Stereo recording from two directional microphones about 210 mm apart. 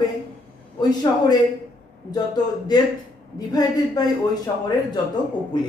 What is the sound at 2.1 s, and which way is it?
A woman's voice, 20° left (ahead or behind).